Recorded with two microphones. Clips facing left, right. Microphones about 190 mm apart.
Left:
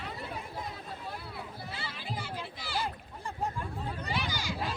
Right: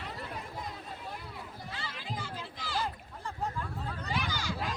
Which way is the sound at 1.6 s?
10° left (ahead or behind).